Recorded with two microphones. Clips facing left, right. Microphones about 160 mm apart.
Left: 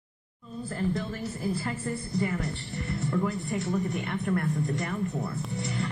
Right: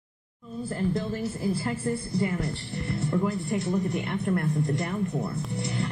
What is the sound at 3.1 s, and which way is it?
A man's voice, 30° right (ahead or behind).